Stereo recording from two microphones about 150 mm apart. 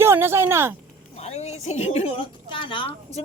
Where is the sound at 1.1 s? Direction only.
45° left (ahead or behind).